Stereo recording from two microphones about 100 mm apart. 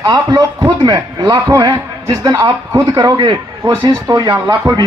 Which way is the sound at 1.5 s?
50° right (ahead or behind).